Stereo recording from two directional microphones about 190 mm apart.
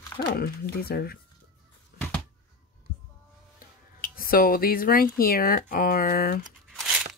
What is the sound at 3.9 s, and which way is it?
Speech, 45° left (ahead or behind).